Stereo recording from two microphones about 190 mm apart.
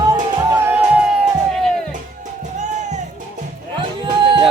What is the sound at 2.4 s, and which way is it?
Music, 40° right (ahead or behind).